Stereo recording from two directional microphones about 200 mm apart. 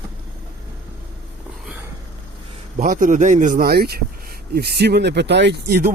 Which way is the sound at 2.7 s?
40° right (ahead or behind).